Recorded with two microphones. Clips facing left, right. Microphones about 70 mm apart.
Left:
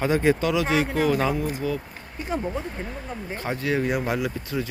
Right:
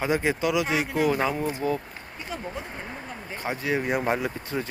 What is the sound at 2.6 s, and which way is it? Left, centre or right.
Speech, right.